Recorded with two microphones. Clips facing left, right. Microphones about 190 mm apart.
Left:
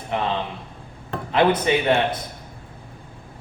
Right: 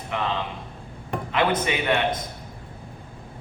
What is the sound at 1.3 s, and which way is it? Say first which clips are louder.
Speech: left 5 dB; 30° left (ahead or behind).